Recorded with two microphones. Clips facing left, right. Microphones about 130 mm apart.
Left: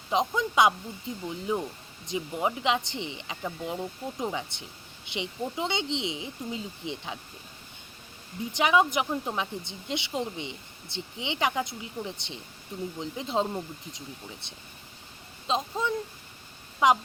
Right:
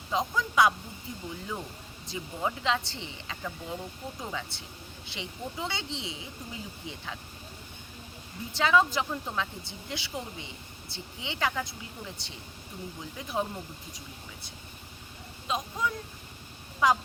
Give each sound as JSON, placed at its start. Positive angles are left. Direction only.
{"t": 0.1, "sound": "speech", "side_deg": 20}
{"t": 8.5, "sound": "speech", "side_deg": 15}
{"t": 15.4, "sound": "speech", "side_deg": 25}